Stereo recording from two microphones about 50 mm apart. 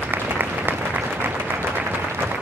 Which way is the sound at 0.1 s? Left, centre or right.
Right.